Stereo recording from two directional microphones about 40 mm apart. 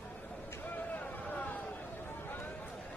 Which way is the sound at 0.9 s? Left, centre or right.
Left.